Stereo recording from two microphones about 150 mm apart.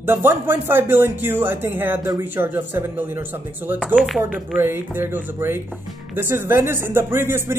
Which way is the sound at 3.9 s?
Centre (ahead or behind).